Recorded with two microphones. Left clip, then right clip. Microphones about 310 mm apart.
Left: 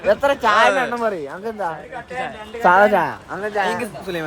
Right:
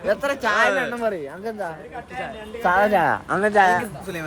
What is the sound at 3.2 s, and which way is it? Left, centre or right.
Speech, right.